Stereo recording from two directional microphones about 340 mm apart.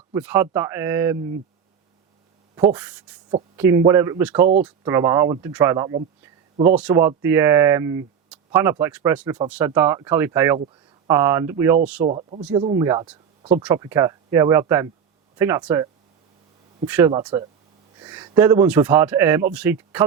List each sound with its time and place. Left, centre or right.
0.1 s speech: centre
2.6 s speech: centre
12.0 s speech: centre
12.4 s a man's voice: centre